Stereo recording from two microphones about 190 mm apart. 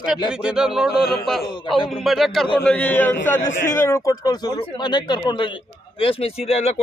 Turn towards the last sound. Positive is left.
turn(degrees=35)  # may be behind; listen again after turning